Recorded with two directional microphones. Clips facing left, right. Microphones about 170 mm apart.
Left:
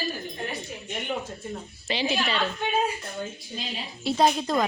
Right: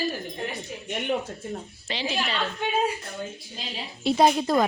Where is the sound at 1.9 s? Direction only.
5° left (ahead or behind).